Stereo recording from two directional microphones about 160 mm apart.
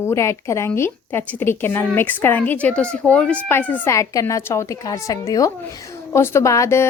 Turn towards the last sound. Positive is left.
turn(degrees=15)  # may be behind; listen again after turning